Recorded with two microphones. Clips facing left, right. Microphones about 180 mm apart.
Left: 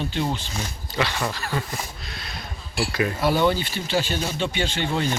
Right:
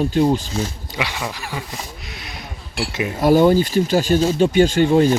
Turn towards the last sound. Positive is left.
turn(degrees=-45)  # may be behind; listen again after turning